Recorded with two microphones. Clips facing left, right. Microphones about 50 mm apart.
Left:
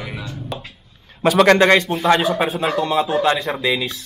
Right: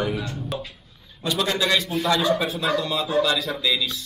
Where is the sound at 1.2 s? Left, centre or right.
Left.